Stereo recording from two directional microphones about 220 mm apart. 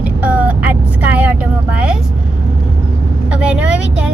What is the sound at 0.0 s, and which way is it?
Vehicle, 5° right (ahead or behind).